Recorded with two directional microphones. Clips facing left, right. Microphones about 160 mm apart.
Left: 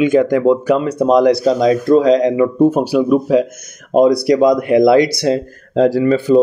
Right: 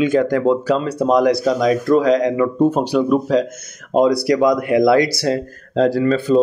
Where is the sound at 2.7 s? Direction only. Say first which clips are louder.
Left 3 dB; 5° left (ahead or behind).